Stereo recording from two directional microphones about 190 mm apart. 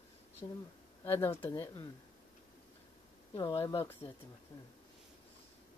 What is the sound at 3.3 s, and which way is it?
Speech, 20° left (ahead or behind).